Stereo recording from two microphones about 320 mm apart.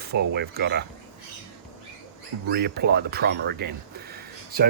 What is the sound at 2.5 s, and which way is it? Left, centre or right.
Speech, right.